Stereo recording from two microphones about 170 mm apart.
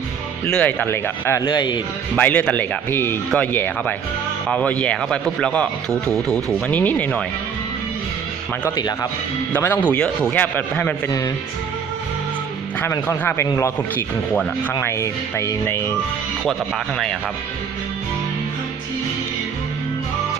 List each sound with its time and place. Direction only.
0.5 s speech: 10° left (ahead or behind)
1.5 s speech: 25° left (ahead or behind)
2.1 s speech: 10° left (ahead or behind)
8.7 s speech: 25° left (ahead or behind)
9.5 s speech: 10° left (ahead or behind)
12.8 s speech: 10° left (ahead or behind)
16.5 s speech: centre (ahead or behind)